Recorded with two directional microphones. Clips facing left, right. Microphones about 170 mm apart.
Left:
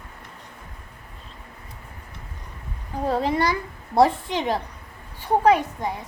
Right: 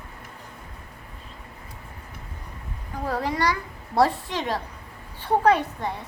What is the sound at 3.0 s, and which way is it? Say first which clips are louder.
A child's voice: left 3 dB; 25° left (ahead or behind).